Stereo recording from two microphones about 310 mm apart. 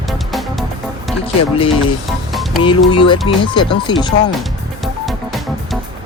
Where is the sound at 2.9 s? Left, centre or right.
Centre.